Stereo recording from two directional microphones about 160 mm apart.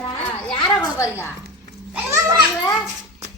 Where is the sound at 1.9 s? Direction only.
20° right (ahead or behind).